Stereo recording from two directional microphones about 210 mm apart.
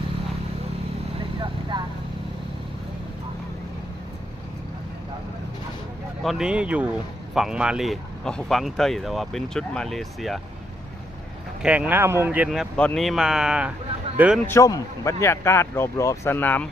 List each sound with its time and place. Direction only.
1.7 s vehicle: 20° right (ahead or behind)
6.2 s speech: 5° right (ahead or behind)
11.6 s speech: 5° right (ahead or behind)
14.4 s speech: 15° left (ahead or behind)